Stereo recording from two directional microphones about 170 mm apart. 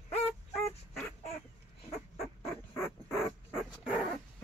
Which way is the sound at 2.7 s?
15° left (ahead or behind).